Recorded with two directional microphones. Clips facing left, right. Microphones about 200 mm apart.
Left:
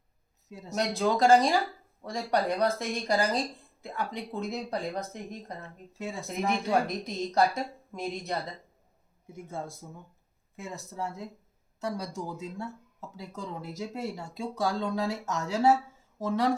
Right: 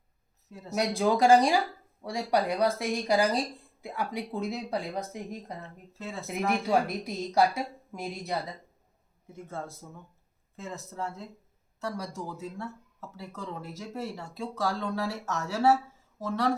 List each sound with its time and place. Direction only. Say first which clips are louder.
0.7 s speech: right 1 dB; 10° right (ahead or behind)
6.0 s speech: left 2 dB; 15° left (ahead or behind)
6.5 s speech: right 1 dB; 5° right (ahead or behind)
9.3 s speech: left 1 dB; 10° left (ahead or behind)